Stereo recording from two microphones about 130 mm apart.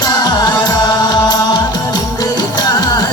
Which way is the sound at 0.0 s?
30° left (ahead or behind).